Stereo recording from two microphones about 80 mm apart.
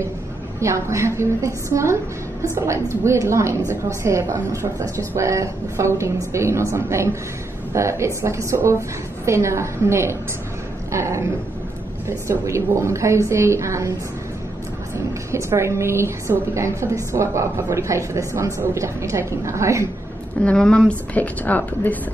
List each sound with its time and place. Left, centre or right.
0.6 s a woman's voice: right
15.0 s a woman's voice: right
20.4 s a woman's voice: centre